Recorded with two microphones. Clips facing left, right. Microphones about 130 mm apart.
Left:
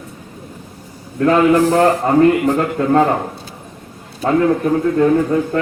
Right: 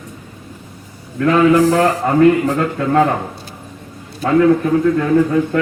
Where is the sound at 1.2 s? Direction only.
35° left (ahead or behind).